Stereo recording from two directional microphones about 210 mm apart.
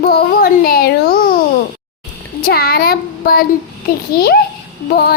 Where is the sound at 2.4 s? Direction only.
45° left (ahead or behind).